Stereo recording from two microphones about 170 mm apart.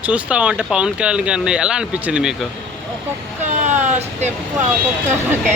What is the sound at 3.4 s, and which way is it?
Vehicle, 45° right (ahead or behind).